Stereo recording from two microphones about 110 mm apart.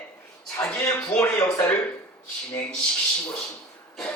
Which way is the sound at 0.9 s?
10° left (ahead or behind).